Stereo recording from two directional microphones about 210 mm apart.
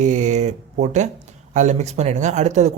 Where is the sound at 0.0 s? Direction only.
35° right (ahead or behind).